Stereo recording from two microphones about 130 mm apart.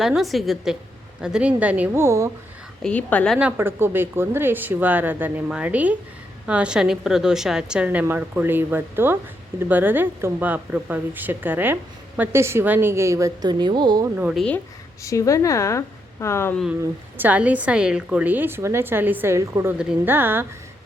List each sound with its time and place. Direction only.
0.0 s a woman's voice: centre (ahead or behind); by 2.3 s 20° right (ahead or behind)
2.8 s a woman's voice: 10° left (ahead or behind)
3.3 s speech: 15° right (ahead or behind); by 14.1 s 30° right (ahead or behind)
14.2 s a woman's voice: 5° right (ahead or behind)
15.0 s speech: 25° left (ahead or behind)
17.2 s speech: 10° right (ahead or behind)